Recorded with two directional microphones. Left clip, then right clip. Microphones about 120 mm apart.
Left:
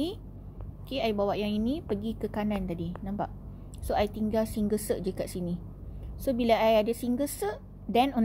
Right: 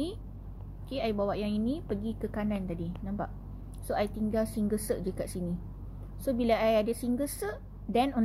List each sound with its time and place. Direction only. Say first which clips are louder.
0.8 s a woman's voice: left 3 dB; 20° left (ahead or behind)